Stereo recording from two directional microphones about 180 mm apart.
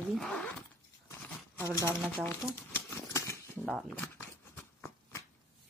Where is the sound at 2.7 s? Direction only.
15° left (ahead or behind).